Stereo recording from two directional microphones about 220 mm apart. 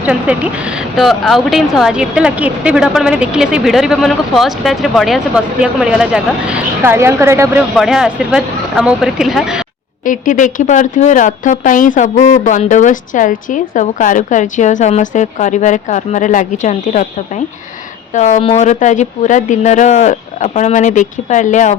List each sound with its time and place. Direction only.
0.0 s a woman's voice: 5° right (ahead or behind)
7.8 s a woman's voice: centre (ahead or behind)
10.0 s a woman's voice: 35° left (ahead or behind)